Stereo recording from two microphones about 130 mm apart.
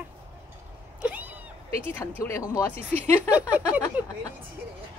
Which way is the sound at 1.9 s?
20° left (ahead or behind).